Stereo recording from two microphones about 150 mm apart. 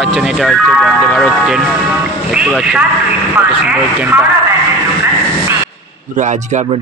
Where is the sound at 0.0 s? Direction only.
Centre (ahead or behind).